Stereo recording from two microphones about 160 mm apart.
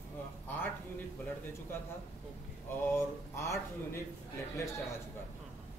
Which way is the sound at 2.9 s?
15° left (ahead or behind).